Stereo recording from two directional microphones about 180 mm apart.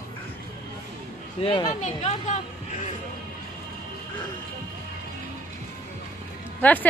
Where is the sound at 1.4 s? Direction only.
25° left (ahead or behind).